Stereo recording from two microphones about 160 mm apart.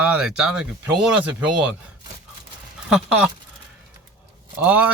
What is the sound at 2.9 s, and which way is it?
Speech, 5° right (ahead or behind).